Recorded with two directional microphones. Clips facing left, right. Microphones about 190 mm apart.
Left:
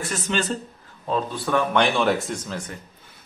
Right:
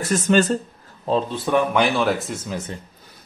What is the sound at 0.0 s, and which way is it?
Speech, 45° right (ahead or behind).